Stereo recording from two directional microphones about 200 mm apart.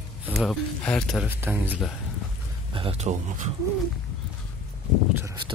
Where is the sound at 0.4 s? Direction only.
5° left (ahead or behind).